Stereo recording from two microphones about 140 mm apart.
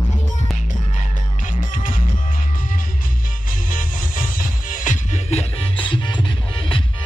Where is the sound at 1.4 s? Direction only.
70° left (ahead or behind).